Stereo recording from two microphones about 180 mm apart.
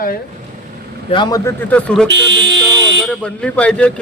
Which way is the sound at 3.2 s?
5° left (ahead or behind).